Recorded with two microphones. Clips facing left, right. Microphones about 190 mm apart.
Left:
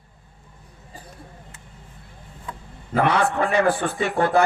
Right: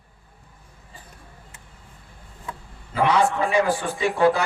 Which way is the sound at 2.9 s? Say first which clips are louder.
Even; 55° left (ahead or behind).